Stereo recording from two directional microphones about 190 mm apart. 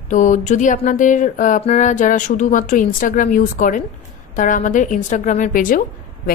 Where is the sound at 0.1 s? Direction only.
40° left (ahead or behind).